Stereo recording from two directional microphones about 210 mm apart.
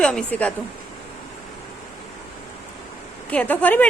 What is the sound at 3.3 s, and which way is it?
Speech, 5° left (ahead or behind).